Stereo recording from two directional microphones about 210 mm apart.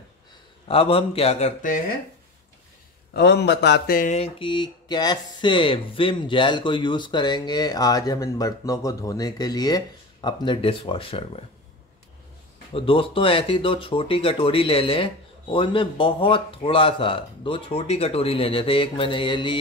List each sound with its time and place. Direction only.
0.7 s speech: 25° left (ahead or behind)
3.1 s speech: 50° left (ahead or behind); by 11.4 s 25° left (ahead or behind)
12.7 s speech: 25° left (ahead or behind)